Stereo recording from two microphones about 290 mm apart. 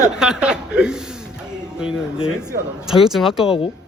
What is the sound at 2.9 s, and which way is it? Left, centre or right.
Speech, centre.